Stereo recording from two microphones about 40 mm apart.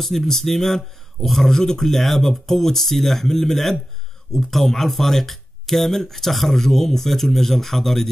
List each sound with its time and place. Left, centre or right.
0.0 s speech: centre